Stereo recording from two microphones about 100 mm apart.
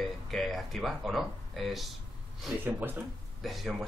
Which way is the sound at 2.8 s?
20° right (ahead or behind).